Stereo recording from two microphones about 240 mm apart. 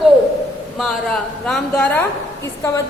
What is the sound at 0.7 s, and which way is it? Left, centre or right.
A woman's voice, centre.